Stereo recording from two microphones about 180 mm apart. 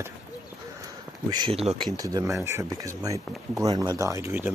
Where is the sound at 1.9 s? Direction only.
20° right (ahead or behind).